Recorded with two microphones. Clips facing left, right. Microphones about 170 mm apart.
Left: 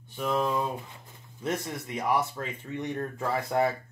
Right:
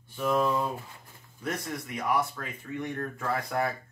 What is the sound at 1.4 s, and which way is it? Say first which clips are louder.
Speech: left 2 dB; 20° left (ahead or behind).